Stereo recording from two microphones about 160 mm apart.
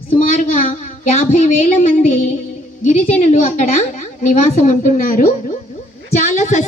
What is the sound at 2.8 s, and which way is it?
A woman's voice, 50° left (ahead or behind).